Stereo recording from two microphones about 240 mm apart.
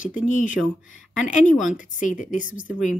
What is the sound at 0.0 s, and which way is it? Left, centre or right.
Speech, left.